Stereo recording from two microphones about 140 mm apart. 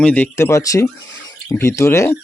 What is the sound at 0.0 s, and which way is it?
Speech, 10° left (ahead or behind).